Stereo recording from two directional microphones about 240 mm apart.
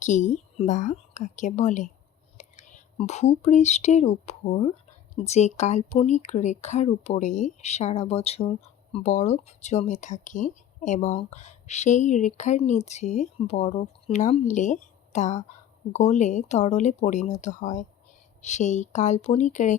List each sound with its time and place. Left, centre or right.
0.0 s a woman's voice: left